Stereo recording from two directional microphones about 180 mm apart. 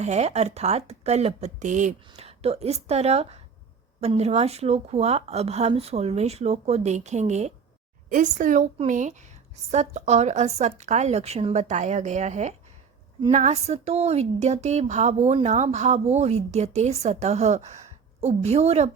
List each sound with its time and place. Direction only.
0.0 s a woman's voice: 40° right (ahead or behind)